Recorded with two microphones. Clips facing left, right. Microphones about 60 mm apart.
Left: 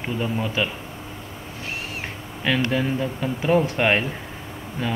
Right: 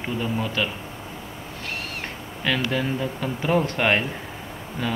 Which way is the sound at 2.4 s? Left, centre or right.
Centre.